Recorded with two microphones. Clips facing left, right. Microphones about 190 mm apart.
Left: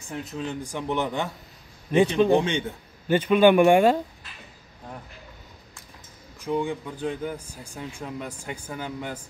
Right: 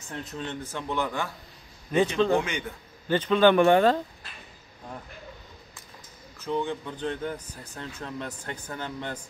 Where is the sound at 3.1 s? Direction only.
10° left (ahead or behind).